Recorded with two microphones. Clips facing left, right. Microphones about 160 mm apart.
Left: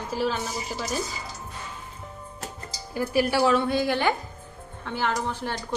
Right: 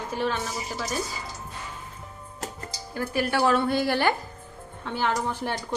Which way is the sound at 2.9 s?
10° left (ahead or behind).